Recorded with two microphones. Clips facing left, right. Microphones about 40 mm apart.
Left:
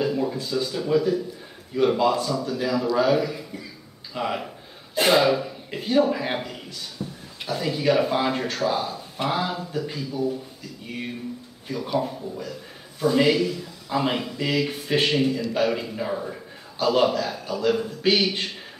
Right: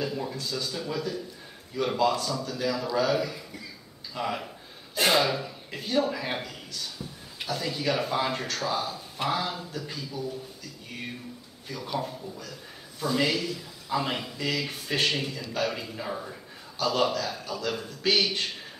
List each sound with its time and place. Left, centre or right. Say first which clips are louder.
0.0 s a man's voice: left 7 dB; centre
7.0 s a sound: left 7 dB; centre
7.4 s a man's voice: left 6 dB; centre
11.6 s a man's voice: left 6 dB; centre